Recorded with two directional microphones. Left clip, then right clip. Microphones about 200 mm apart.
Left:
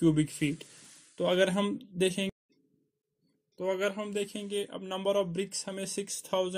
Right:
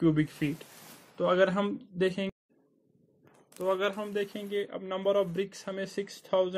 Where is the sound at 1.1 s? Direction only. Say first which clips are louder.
Right 2 dB; 10° left (ahead or behind).